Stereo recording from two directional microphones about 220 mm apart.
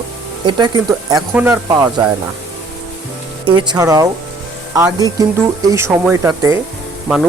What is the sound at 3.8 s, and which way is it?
Speech, 15° right (ahead or behind).